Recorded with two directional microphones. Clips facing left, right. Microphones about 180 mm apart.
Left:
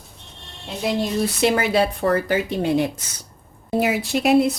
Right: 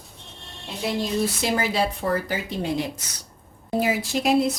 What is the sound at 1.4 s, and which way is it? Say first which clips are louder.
Speech: left 5 dB; 65° left (ahead or behind).